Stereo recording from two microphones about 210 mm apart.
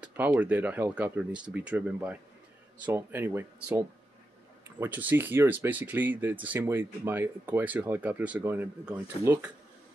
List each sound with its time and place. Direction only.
0.0 s speech: 10° right (ahead or behind)